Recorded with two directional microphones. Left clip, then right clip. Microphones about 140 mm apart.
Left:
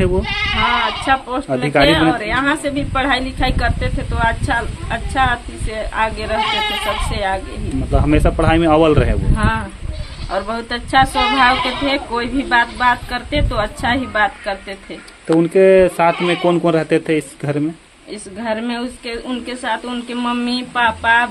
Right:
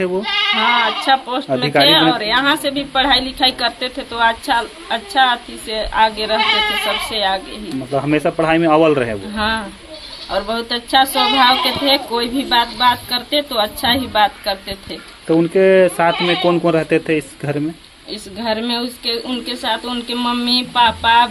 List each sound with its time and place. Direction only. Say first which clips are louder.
0.7 s a woman's voice: right 2 dB; 5° left (ahead or behind)
7.9 s speech: even; 25° left (ahead or behind)
9.4 s a woman's voice: right 2 dB; 5° left (ahead or behind)